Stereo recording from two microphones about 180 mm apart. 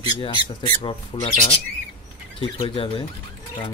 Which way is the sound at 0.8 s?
30° left (ahead or behind).